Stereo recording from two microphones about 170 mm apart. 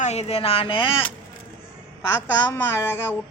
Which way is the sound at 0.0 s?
40° left (ahead or behind).